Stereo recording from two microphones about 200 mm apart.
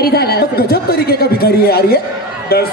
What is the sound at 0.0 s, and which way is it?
A man's voice, 50° left (ahead or behind).